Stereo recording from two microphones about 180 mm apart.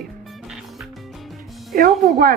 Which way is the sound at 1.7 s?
55° right (ahead or behind).